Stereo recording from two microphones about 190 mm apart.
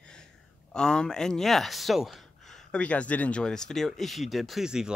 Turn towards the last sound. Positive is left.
turn(degrees=-5)  # may be behind; listen again after turning